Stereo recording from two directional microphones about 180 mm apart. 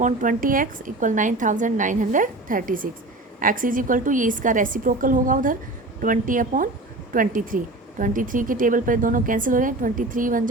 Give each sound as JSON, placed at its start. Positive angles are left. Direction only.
{"t": 0.0, "sound": "speech", "side_deg": -45}